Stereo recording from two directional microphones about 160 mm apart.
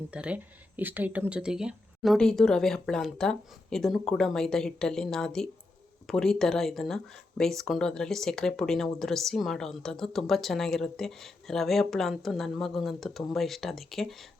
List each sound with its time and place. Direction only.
0.1 s speech: 5° right (ahead or behind)